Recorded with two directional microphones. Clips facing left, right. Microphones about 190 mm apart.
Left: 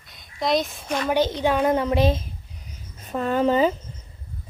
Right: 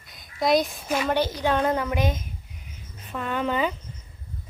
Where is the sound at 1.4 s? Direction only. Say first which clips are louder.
Left 2 dB; 15° left (ahead or behind).